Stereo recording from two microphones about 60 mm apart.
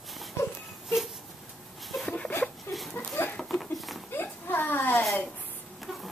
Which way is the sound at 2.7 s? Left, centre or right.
Centre.